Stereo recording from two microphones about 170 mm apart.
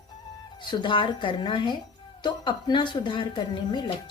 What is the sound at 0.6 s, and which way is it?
Speech, 25° left (ahead or behind).